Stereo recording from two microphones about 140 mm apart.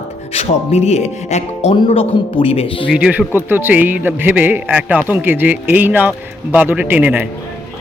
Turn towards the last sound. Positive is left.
turn(degrees=-10)  # may be behind; listen again after turning